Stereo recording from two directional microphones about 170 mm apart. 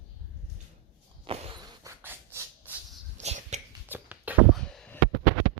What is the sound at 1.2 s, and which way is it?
Walk, 35° right (ahead or behind).